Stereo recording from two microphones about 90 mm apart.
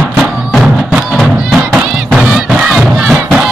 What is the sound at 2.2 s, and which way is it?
Battle cry, 10° right (ahead or behind).